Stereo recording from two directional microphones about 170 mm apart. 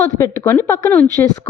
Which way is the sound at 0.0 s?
20° left (ahead or behind).